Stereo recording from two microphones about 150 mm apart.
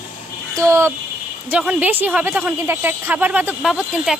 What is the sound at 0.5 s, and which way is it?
A woman's voice, 20° right (ahead or behind).